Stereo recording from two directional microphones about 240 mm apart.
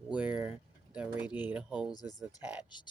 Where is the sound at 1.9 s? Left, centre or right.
Centre.